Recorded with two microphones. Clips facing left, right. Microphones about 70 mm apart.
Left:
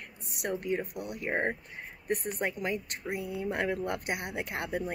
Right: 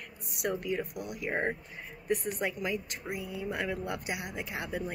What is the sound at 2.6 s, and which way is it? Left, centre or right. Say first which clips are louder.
Speech: left 1 dB; left.